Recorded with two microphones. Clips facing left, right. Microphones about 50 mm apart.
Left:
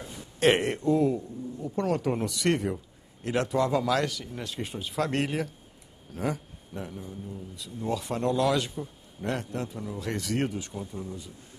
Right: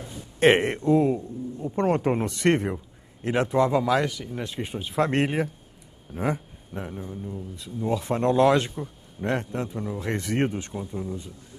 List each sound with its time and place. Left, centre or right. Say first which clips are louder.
0.4 s a man's voice: right 4 dB; right